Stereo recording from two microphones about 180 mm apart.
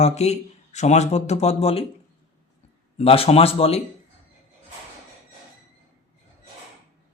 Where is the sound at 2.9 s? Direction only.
35° left (ahead or behind).